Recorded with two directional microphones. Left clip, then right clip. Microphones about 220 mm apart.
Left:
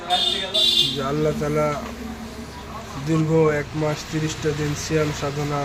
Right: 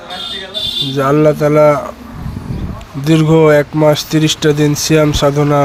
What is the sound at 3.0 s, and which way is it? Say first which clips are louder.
Speech: right 10 dB; 45° right (ahead or behind).